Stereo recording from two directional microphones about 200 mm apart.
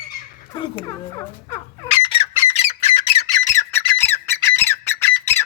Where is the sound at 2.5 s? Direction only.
30° left (ahead or behind).